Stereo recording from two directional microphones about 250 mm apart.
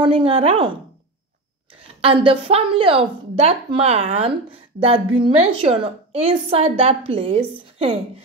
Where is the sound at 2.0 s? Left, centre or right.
Right.